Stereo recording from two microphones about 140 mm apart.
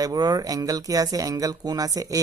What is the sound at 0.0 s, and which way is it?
Speech, 25° right (ahead or behind).